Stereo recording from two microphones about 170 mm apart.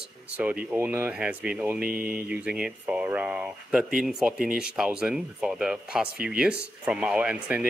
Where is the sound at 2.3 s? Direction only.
5° right (ahead or behind).